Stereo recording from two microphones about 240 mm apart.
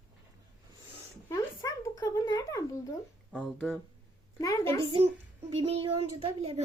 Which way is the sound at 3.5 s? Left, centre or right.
Centre.